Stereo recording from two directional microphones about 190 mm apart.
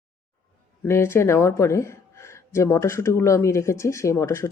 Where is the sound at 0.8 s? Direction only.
10° left (ahead or behind).